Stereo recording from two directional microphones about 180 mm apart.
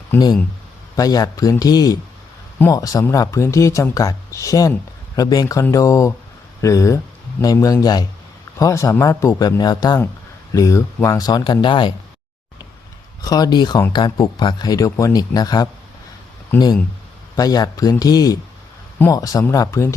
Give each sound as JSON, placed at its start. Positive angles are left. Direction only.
{"t": 0.9, "sound": "speech", "side_deg": 20}
{"t": 13.2, "sound": "speech", "side_deg": 20}
{"t": 17.3, "sound": "speech", "side_deg": 20}